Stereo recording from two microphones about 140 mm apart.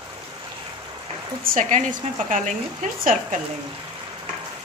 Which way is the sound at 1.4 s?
80° right.